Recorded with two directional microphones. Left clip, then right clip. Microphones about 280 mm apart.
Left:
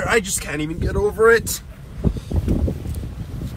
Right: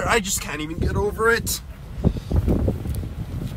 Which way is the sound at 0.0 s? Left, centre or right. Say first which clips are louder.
Left 2 dB; centre.